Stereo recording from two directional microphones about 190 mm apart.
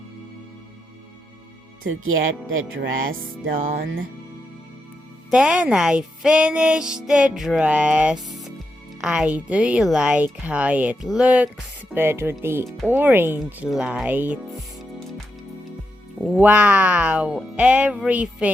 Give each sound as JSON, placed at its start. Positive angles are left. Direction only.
{"t": 1.8, "sound": "speech", "side_deg": -90}
{"t": 3.4, "sound": "music", "side_deg": -45}
{"t": 5.3, "sound": "speech", "side_deg": -5}
{"t": 12.6, "sound": "speech", "side_deg": 0}
{"t": 16.2, "sound": "speech", "side_deg": -10}